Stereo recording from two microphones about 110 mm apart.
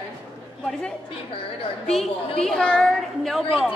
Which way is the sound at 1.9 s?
Centre (ahead or behind).